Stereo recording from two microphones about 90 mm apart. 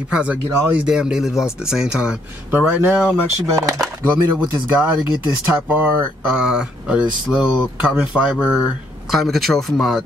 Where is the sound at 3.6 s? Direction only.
40° right (ahead or behind).